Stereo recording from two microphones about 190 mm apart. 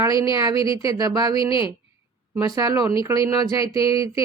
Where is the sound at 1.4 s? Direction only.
25° left (ahead or behind).